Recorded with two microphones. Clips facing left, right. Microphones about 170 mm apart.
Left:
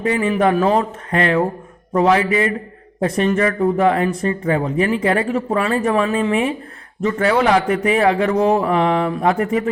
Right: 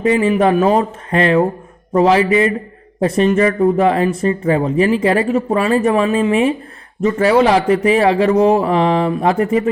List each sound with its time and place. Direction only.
0.0 s speech: 20° right (ahead or behind)